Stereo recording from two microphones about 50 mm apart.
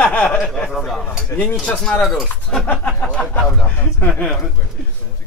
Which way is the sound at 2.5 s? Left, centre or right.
Centre.